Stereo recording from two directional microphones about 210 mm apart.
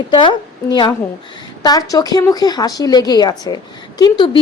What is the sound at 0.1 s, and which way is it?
A woman's voice, 20° left (ahead or behind).